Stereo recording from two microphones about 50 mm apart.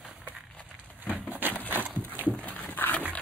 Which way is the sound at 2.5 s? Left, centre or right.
Left.